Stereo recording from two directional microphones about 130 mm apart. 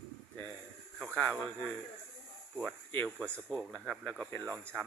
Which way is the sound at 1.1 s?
10° left (ahead or behind).